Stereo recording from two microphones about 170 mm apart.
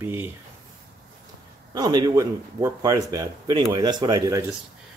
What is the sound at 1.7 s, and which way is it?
Speech, 25° right (ahead or behind).